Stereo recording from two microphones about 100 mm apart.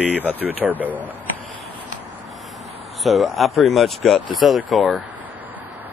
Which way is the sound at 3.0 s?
Centre (ahead or behind).